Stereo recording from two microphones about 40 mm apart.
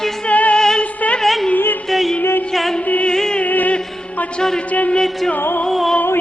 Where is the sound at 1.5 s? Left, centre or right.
Left.